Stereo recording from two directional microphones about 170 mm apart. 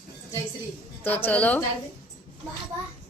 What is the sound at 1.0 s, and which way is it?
Speech, 10° left (ahead or behind).